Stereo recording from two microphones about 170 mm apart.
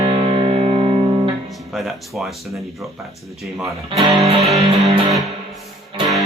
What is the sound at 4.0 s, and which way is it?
Music, 35° right (ahead or behind).